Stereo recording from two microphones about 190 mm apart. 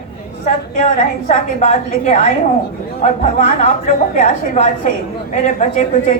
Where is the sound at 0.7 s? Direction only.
40° left (ahead or behind).